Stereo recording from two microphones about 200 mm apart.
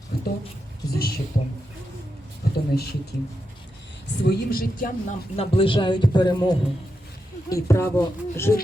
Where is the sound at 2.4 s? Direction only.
50° left (ahead or behind).